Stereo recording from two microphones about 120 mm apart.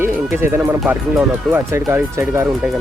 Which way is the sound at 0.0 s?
20° right (ahead or behind).